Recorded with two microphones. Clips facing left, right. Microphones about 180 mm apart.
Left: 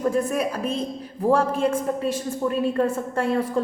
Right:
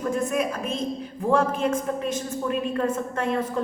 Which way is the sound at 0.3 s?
35° left (ahead or behind).